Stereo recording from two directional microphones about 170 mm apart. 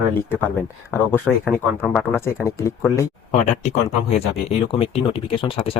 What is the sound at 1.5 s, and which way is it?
Speech, centre (ahead or behind).